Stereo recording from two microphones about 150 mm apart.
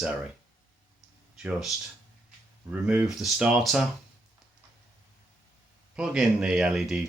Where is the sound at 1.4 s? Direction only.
5° right (ahead or behind).